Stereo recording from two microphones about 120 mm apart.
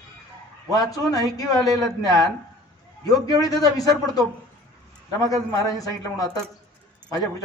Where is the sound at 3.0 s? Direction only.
30° left (ahead or behind).